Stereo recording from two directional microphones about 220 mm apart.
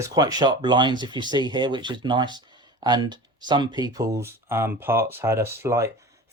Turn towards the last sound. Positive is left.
turn(degrees=-15)  # may be behind; listen again after turning